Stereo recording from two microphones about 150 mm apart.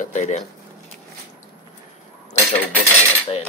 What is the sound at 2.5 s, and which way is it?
Speech, 10° left (ahead or behind).